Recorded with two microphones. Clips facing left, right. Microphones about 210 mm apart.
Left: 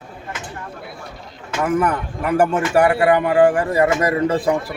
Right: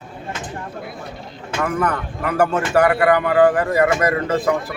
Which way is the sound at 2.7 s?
25° left (ahead or behind).